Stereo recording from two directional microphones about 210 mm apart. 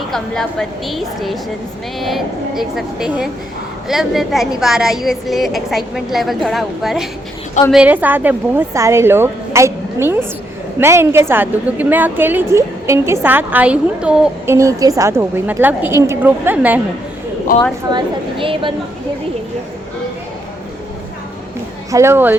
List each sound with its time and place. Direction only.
0.9 s a woman's voice: centre (ahead or behind)
17.8 s a woman's voice: 20° right (ahead or behind)
21.9 s a woman's voice: 10° right (ahead or behind)